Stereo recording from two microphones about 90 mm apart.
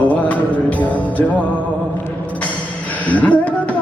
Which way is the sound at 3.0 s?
15° left (ahead or behind).